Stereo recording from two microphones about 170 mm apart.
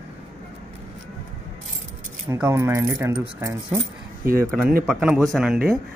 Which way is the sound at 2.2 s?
15° right (ahead or behind).